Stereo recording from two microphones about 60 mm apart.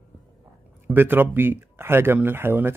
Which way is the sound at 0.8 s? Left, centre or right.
Right.